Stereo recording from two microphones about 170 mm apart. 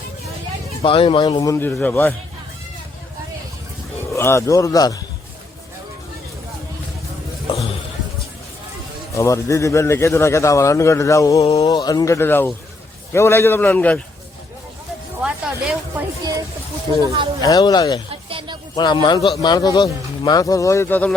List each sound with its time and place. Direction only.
0.8 s speech: 30° left (ahead or behind); by 2.1 s 10° left (ahead or behind)
4.1 s speech: 15° left (ahead or behind)
9.1 s a man's voice: 20° left (ahead or behind)
15.2 s a sound: 5° right (ahead or behind)
17.0 s speech: 20° right (ahead or behind)
17.4 s speech: 20° left (ahead or behind)
18.3 s music: 30° right (ahead or behind)
18.8 s speech: 25° left (ahead or behind); by 21.2 s 10° left (ahead or behind)